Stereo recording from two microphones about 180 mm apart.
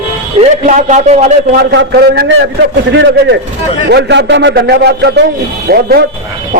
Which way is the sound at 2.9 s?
75° right (ahead or behind).